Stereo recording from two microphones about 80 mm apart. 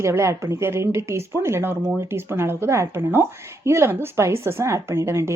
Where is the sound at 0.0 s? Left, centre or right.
Right.